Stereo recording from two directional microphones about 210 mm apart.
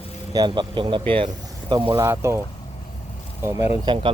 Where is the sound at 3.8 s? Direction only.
25° right (ahead or behind).